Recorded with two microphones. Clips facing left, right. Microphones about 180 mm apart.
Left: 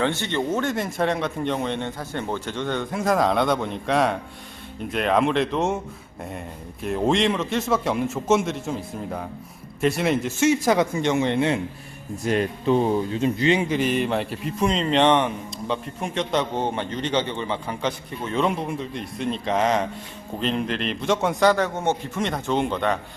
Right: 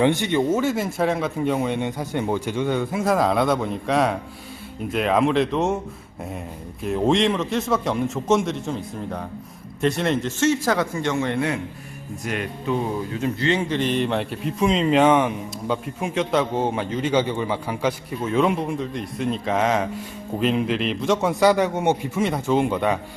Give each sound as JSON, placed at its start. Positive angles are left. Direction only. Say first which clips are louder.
{"t": 0.0, "sound": "speech", "louder": "right 5 dB", "side_deg": -15}
{"t": 6.8, "sound": "a man's voice", "louder": "right 2 dB", "side_deg": 0}